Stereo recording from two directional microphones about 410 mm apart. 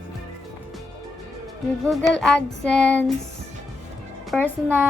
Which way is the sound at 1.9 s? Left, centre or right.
Centre.